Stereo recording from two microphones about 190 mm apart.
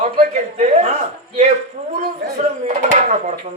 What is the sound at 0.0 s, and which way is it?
Speech, 35° right (ahead or behind).